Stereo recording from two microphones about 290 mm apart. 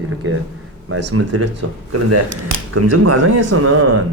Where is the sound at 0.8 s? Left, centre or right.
Right.